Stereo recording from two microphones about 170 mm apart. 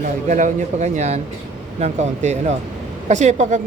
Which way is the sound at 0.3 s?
45° right (ahead or behind).